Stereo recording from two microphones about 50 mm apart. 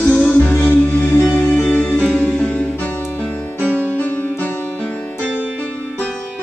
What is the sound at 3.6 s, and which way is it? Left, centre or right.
Music, right.